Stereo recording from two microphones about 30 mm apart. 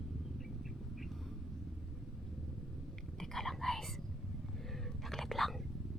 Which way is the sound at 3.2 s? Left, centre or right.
Centre.